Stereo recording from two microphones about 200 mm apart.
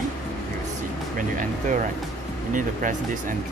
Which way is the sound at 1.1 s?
40° right (ahead or behind).